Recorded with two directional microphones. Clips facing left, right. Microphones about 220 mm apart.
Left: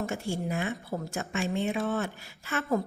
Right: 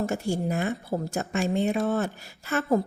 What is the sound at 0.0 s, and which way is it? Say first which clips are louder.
A woman's voice: right 5 dB; 40° right (ahead or behind).